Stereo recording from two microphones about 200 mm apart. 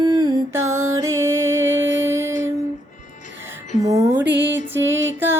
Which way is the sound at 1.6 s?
70° right (ahead or behind).